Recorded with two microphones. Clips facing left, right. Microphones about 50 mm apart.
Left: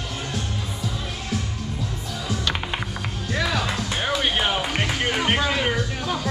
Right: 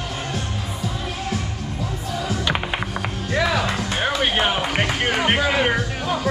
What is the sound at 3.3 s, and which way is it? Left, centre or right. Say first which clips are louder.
Music: right 4 dB; centre.